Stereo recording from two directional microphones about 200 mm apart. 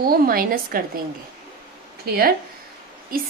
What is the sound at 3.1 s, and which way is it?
Speech, 45° right (ahead or behind).